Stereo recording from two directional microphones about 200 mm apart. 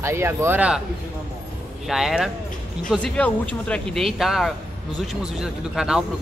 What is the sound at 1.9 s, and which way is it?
Speech, centre (ahead or behind).